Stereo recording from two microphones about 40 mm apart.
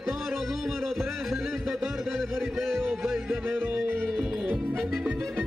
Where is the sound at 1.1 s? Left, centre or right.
Centre.